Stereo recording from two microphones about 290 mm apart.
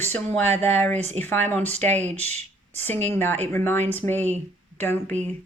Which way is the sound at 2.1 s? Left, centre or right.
Right.